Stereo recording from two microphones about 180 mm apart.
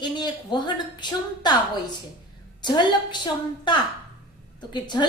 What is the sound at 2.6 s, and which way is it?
A woman's voice, 25° left (ahead or behind).